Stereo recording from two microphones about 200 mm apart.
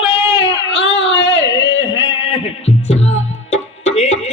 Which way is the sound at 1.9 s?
80° left.